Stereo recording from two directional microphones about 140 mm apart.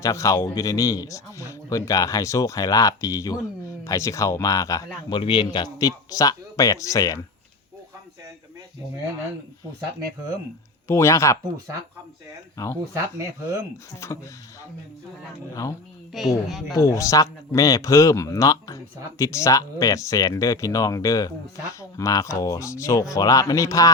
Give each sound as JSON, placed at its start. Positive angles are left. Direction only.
{"t": 0.0, "sound": "speech", "side_deg": 20}
{"t": 10.8, "sound": "speech", "side_deg": 20}
{"t": 12.6, "sound": "speech", "side_deg": 20}
{"t": 12.9, "sound": "speech", "side_deg": -20}
{"t": 14.0, "sound": "speech", "side_deg": 20}
{"t": 16.1, "sound": "speech", "side_deg": 0}
{"t": 16.7, "sound": "speech", "side_deg": 20}